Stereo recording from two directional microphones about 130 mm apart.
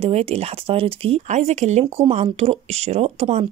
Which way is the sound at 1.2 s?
65° right (ahead or behind).